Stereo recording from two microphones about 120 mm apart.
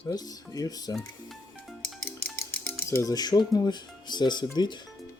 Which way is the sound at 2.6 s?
25° left (ahead or behind).